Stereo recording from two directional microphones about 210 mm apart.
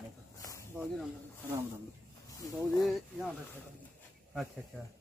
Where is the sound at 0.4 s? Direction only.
15° left (ahead or behind).